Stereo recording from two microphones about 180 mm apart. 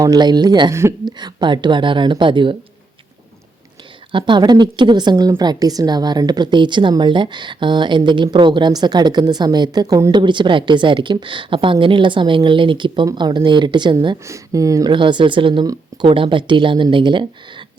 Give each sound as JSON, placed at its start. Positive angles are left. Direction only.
{"t": 0.0, "sound": "a woman's voice", "side_deg": -20}
{"t": 4.1, "sound": "a woman's voice", "side_deg": -25}